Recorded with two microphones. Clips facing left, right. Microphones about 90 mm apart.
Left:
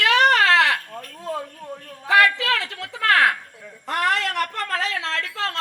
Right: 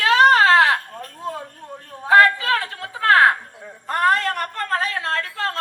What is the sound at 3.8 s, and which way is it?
A woman's voice, 75° left (ahead or behind).